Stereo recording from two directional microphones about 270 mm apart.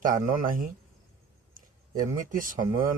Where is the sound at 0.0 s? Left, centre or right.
Right.